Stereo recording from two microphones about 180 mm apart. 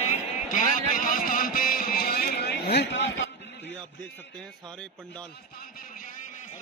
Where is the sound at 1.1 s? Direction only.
50° left (ahead or behind); by 3.3 s 90° left.